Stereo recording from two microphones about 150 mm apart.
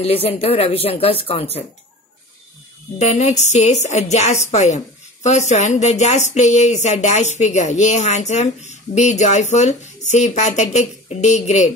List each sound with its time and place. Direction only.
0.0 s speech: 40° left (ahead or behind)
3.0 s a woman's voice: 50° left (ahead or behind)